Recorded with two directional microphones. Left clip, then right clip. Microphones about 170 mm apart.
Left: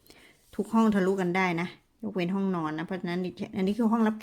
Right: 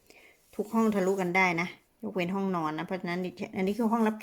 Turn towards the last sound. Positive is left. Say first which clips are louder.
# left 1 dB
turn(degrees=5)  # may be behind; listen again after turning